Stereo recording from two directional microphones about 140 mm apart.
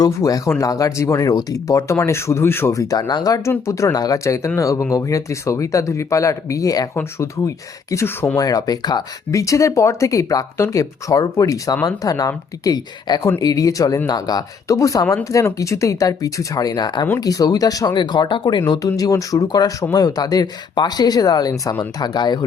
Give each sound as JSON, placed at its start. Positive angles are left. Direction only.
{"t": 0.0, "sound": "speech", "side_deg": 25}